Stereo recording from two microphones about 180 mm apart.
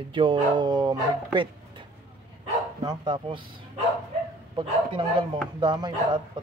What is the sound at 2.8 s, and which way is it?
Speech, 25° right (ahead or behind).